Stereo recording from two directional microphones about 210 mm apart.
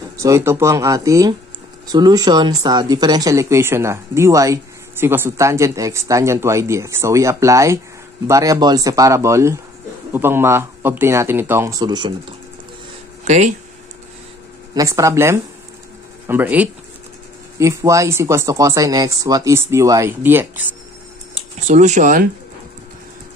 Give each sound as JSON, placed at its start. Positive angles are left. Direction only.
{"t": 0.2, "sound": "speech", "side_deg": -15}
{"t": 14.7, "sound": "speech", "side_deg": -15}
{"t": 21.4, "sound": "speech", "side_deg": -35}